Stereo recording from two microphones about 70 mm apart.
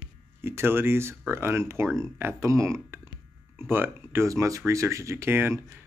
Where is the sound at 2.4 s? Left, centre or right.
Right.